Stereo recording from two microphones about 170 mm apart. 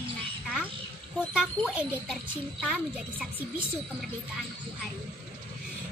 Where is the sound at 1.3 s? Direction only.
5° right (ahead or behind).